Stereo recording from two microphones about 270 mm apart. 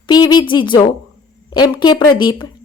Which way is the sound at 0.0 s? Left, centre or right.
Centre.